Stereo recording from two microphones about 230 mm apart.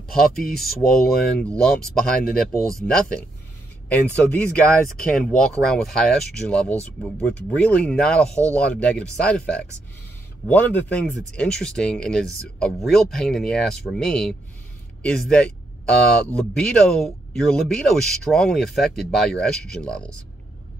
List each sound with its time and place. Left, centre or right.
0.4 s speech: centre
3.9 s speech: centre